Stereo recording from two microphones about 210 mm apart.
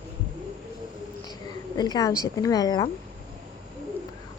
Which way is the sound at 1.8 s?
20° left (ahead or behind).